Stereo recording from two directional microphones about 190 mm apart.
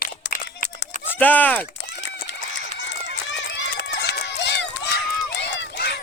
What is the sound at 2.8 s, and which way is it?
Run, 70° left (ahead or behind).